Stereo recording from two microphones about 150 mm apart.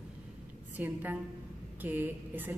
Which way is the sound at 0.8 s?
10° right (ahead or behind).